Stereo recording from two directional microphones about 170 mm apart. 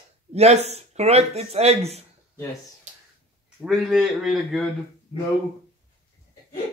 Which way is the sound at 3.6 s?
Centre (ahead or behind).